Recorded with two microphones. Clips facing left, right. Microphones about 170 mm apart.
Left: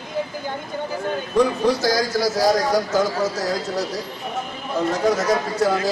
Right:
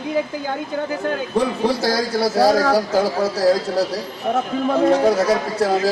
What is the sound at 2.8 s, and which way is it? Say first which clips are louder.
A man's voice: right 2 dB; 30° right (ahead or behind).